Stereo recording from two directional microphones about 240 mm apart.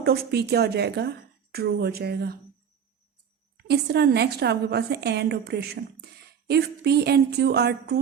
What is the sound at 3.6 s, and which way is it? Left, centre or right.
A woman's voice, right.